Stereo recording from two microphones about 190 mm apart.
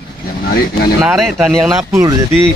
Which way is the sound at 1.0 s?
Centre (ahead or behind).